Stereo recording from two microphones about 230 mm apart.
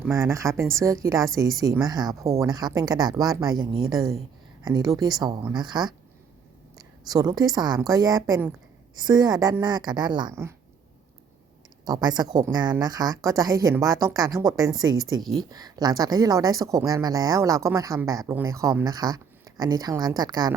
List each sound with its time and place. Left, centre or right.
0.0 s speech: centre
4.6 s speech: centre
7.1 s speech: centre
11.9 s speech: centre